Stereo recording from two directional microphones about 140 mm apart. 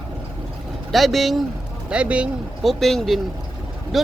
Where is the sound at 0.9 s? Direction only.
Centre (ahead or behind).